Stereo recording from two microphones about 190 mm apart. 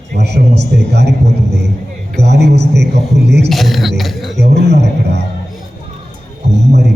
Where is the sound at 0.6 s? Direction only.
60° right (ahead or behind).